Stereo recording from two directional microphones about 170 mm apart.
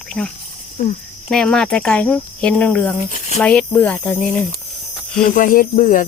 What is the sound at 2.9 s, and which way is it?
Speech, 45° left (ahead or behind).